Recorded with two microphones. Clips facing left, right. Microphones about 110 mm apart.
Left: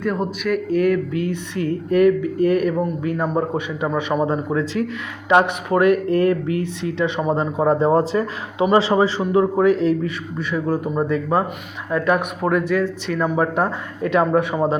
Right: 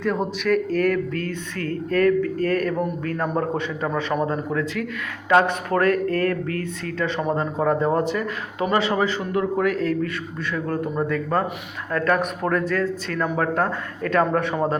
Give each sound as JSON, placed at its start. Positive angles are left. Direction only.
{"t": 0.0, "sound": "speech", "side_deg": 5}